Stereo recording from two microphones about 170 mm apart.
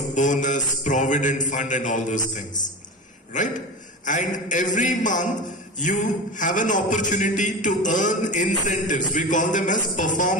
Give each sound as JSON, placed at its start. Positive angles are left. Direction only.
{"t": 0.1, "sound": "a man's voice", "side_deg": 45}
{"t": 4.0, "sound": "a man's voice", "side_deg": 50}